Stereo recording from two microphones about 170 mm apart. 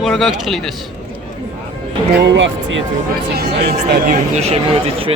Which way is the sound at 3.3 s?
65° right (ahead or behind).